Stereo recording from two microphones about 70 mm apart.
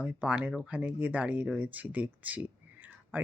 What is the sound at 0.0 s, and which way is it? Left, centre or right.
Speech, centre.